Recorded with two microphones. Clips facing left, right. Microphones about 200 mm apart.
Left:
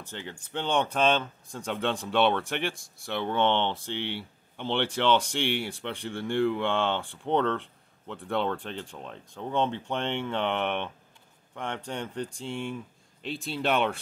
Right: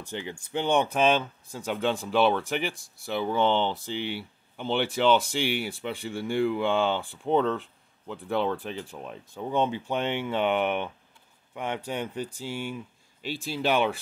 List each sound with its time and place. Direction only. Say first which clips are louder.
0.0 s speech: right 4 dB; 15° right (ahead or behind)